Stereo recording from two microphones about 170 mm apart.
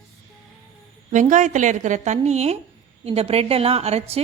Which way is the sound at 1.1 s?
45° right (ahead or behind).